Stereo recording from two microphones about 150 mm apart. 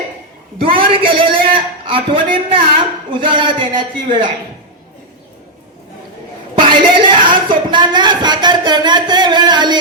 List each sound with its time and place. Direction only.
0.7 s a man's voice: 35° right (ahead or behind)
6.6 s speech: 35° right (ahead or behind)